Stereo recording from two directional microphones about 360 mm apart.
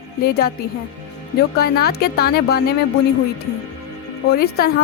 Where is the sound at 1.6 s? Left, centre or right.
Left.